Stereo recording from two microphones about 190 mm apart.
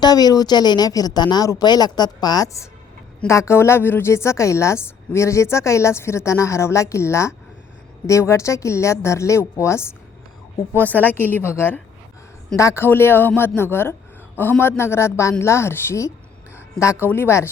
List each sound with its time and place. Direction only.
0.0 s a woman's voice: 20° left (ahead or behind)